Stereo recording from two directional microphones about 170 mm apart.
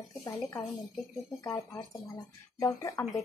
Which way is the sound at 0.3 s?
15° left (ahead or behind).